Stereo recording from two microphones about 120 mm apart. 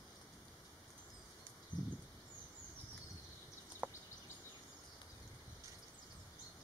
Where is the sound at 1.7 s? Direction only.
15° right (ahead or behind).